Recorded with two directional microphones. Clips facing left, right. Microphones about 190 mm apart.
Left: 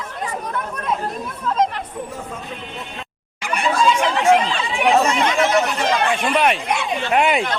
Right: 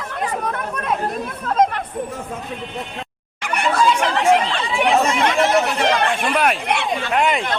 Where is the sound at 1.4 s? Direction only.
55° right (ahead or behind).